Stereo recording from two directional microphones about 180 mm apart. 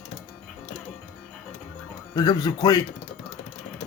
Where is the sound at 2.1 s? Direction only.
20° left (ahead or behind).